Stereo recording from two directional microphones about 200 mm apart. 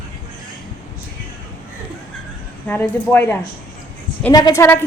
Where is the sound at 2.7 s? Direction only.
10° left (ahead or behind).